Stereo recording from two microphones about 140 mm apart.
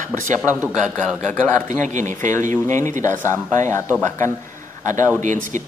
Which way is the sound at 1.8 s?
65° right (ahead or behind).